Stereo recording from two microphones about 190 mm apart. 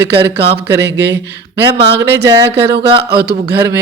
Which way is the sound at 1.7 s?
25° right (ahead or behind).